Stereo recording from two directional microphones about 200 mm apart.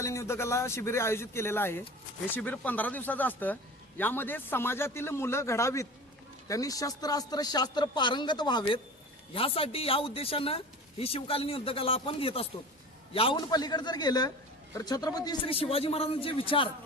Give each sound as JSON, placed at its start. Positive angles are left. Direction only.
{"t": 0.0, "sound": "a man's voice", "side_deg": 15}